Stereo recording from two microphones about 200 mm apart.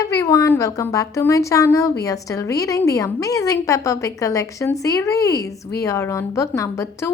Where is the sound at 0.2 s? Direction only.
15° left (ahead or behind).